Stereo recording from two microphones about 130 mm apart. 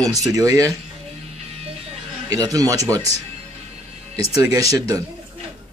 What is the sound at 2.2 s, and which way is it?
Speech, 25° right (ahead or behind).